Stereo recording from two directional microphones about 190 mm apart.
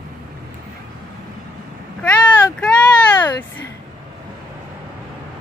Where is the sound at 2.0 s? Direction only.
5° left (ahead or behind).